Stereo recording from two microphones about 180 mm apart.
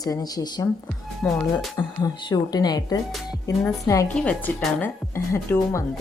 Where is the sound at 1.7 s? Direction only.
20° left (ahead or behind).